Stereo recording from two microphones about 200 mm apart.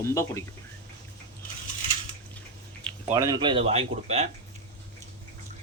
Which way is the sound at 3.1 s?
15° right (ahead or behind).